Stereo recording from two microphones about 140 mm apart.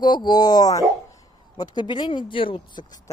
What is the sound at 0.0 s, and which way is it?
Speech, 30° left (ahead or behind).